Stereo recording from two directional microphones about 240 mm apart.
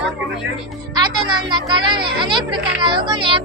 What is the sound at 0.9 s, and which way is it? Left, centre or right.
Speech, centre.